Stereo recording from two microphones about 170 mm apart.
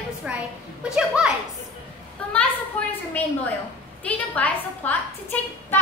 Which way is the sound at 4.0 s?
10° left (ahead or behind).